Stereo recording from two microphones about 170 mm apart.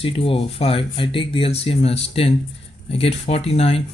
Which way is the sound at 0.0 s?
35° left (ahead or behind).